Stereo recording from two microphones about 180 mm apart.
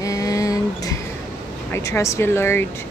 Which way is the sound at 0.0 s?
20° left (ahead or behind).